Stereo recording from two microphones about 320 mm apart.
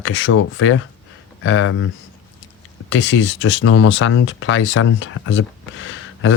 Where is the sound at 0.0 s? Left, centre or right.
Left.